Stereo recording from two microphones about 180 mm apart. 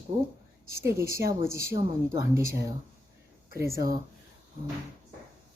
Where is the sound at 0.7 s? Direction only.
15° right (ahead or behind).